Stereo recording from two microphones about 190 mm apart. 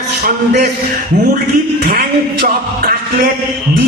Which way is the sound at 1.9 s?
55° right (ahead or behind).